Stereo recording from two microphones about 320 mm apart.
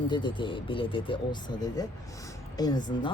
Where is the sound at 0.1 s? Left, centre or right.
Centre.